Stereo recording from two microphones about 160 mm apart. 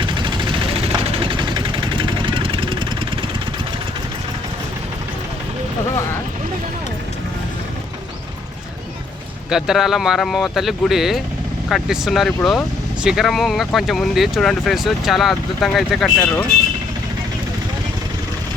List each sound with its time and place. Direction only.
0.0 s vehicle: 30° right (ahead or behind)
9.5 s speech: 5° right (ahead or behind)